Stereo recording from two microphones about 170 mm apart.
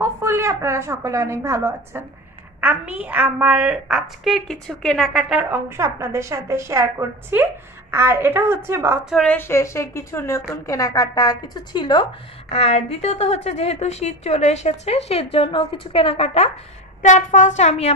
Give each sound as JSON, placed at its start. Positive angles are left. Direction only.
{"t": 0.0, "sound": "a woman's voice", "side_deg": -15}
{"t": 9.1, "sound": "a woman's voice", "side_deg": 5}
{"t": 17.0, "sound": "speech", "side_deg": 45}